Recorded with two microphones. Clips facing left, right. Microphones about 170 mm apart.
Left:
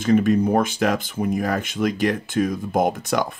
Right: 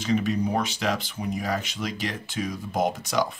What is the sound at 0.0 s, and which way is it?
Speech, 50° left (ahead or behind).